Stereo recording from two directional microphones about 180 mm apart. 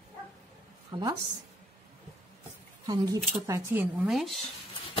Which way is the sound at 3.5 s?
10° right (ahead or behind).